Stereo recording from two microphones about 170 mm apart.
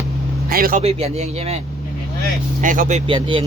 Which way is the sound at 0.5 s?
60° right (ahead or behind).